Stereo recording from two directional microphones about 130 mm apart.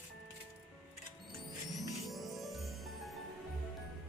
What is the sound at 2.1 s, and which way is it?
Music, centre (ahead or behind).